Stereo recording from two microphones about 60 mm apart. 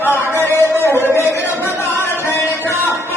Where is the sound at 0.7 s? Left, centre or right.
Right.